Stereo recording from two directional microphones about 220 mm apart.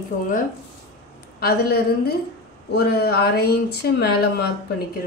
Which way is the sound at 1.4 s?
45° left (ahead or behind).